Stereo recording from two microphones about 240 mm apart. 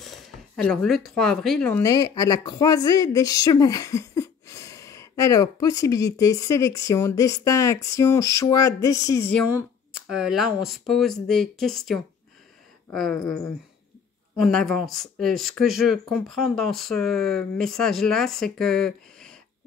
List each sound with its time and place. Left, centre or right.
0.0 s speech: centre
9.5 s speech: centre
14.3 s speech: centre